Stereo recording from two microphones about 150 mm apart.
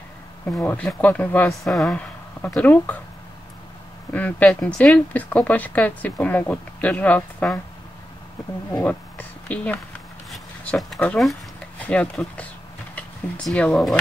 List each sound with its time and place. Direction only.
0.5 s speech: 5° left (ahead or behind)
4.1 s speech: 10° left (ahead or behind)
8.7 s speech: 10° left (ahead or behind)
10.3 s a sound: 5° left (ahead or behind)
11.0 s speech: 5° left (ahead or behind)